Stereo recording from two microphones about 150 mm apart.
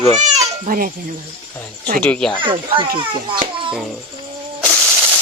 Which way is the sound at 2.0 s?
5° left (ahead or behind).